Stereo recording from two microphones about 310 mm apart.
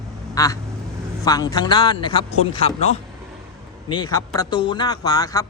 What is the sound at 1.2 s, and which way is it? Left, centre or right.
A man's voice, centre.